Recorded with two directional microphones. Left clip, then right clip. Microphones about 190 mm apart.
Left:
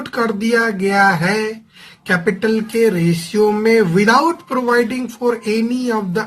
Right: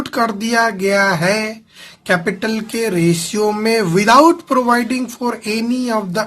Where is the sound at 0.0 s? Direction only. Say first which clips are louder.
Right 1 dB; 30° right (ahead or behind).